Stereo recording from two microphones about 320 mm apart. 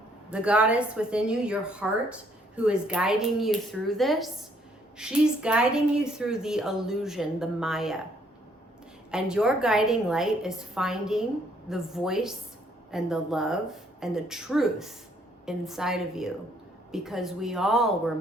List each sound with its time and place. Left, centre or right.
0.3 s a woman's voice: centre
9.1 s a woman's voice: centre